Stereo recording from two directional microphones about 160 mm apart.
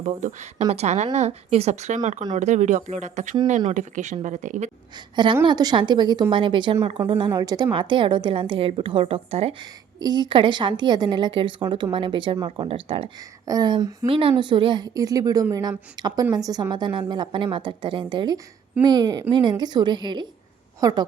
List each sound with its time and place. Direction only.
0.0 s speech: 50° right (ahead or behind)
4.9 s a woman's voice: 30° right (ahead or behind)